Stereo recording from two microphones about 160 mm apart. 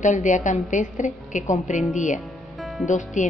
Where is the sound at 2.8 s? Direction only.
50° left (ahead or behind).